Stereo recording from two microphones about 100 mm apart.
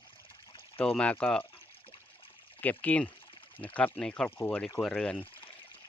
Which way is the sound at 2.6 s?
15° left (ahead or behind).